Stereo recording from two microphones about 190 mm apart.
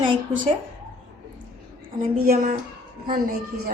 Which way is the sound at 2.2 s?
50° right (ahead or behind).